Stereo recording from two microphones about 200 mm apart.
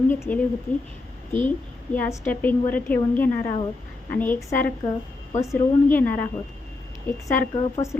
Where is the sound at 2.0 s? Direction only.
10° left (ahead or behind).